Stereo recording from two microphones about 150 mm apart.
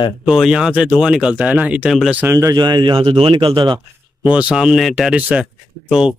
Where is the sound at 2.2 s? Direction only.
20° right (ahead or behind).